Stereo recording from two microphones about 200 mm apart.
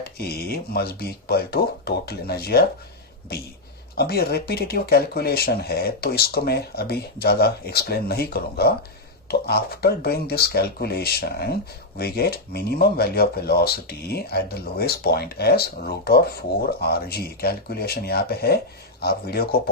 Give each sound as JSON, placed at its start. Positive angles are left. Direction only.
{"t": 0.0, "sound": "speech", "side_deg": 50}